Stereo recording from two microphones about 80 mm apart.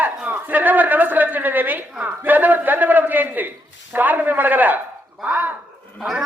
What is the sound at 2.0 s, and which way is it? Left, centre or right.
A man's voice, right.